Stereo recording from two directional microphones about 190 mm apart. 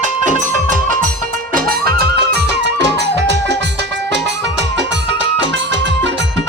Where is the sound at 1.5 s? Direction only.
50° right (ahead or behind).